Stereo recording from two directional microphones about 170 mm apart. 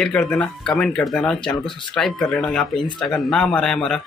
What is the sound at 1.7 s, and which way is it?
Speech, 30° left (ahead or behind).